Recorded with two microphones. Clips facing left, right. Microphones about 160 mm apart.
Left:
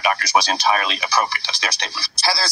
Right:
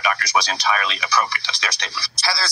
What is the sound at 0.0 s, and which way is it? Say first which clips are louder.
Speech: left 3 dB; 30° left (ahead or behind).